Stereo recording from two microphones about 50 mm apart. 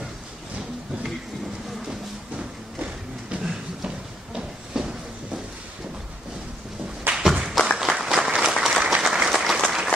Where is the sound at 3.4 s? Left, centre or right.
Centre.